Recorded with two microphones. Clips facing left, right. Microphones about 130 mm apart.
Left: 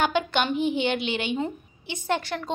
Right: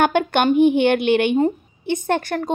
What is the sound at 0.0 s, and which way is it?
A woman's voice, 55° right (ahead or behind).